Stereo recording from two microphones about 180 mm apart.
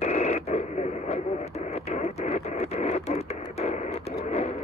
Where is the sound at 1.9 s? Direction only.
40° left (ahead or behind).